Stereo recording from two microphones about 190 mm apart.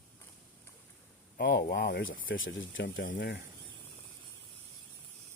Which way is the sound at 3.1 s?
65° left (ahead or behind).